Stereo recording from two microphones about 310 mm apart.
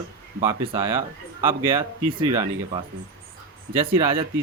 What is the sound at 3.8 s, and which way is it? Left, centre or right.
Speech, centre.